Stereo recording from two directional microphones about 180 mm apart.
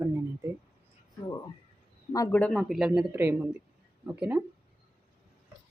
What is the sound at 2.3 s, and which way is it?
Speech, 5° left (ahead or behind).